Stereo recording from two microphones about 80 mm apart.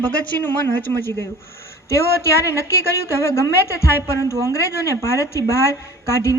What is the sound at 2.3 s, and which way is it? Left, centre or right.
A woman's voice, left.